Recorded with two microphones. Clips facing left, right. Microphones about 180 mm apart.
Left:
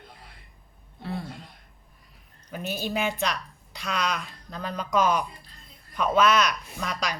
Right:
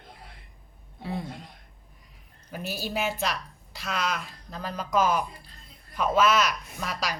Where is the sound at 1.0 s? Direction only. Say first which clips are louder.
Even; 15° right (ahead or behind).